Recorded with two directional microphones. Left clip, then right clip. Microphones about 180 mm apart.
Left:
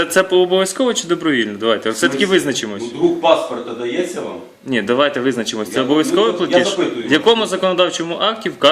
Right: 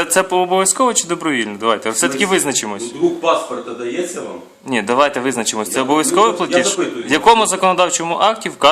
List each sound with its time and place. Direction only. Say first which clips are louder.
0.0 s speech: left 1 dB; 25° right (ahead or behind)
4.7 s speech: right 1 dB; 25° right (ahead or behind)